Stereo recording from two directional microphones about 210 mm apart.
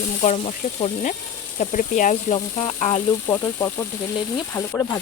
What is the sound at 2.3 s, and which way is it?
Speech, 25° left (ahead or behind).